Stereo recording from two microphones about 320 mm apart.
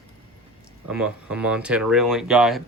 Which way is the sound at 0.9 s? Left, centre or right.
Centre.